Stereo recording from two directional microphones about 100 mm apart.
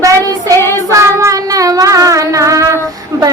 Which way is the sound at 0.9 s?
30° right (ahead or behind).